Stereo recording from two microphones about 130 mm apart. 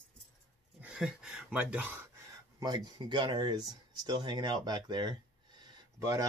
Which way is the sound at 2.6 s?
30° right (ahead or behind).